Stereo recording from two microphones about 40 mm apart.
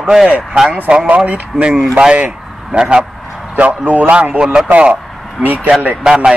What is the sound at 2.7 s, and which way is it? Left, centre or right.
Speech, centre.